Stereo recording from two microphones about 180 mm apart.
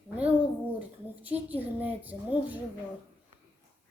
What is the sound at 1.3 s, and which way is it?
Speech, 10° right (ahead or behind).